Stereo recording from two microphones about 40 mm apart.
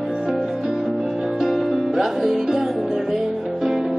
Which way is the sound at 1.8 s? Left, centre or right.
Centre.